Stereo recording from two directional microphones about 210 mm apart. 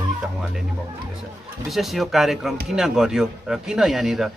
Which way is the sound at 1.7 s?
Centre (ahead or behind).